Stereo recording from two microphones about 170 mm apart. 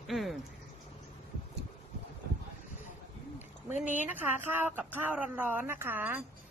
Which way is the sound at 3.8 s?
10° right (ahead or behind).